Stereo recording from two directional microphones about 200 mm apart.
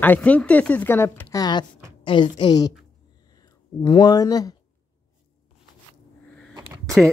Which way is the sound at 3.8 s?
20° left (ahead or behind).